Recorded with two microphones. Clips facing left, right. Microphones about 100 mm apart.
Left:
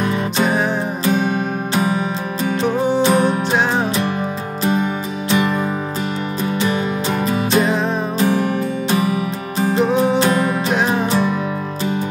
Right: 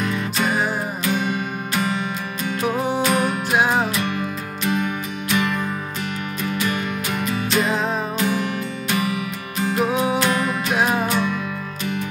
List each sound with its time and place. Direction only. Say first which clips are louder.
0.1 s music: left 4 dB; 30° left (ahead or behind)
1.8 s music: left 4 dB; 35° left (ahead or behind)
3.5 s music: left 1 dB; 10° right (ahead or behind)
5.3 s music: left 4 dB; 30° left (ahead or behind)
9.8 s music: left 5 dB; 5° right (ahead or behind)
10.1 s music: left 4 dB; 35° left (ahead or behind)
10.7 s music: even; 5° right (ahead or behind)
11.1 s music: left 4 dB; 35° left (ahead or behind)